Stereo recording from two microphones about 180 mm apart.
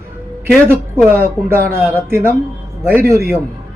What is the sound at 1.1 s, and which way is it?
A man's voice, 15° right (ahead or behind).